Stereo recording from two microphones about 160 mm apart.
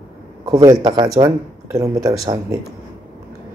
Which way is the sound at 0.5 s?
25° right (ahead or behind).